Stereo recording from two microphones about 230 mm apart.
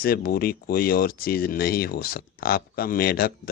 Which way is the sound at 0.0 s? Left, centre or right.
Left.